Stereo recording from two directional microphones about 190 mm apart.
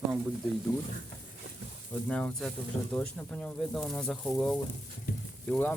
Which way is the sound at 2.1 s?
5° left (ahead or behind).